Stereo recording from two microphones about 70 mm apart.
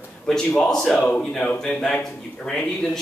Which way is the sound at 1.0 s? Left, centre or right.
Centre.